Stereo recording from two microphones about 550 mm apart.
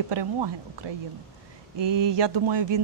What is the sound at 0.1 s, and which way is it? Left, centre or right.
Speech, right.